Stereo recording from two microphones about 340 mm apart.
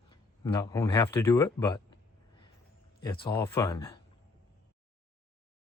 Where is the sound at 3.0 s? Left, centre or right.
Centre.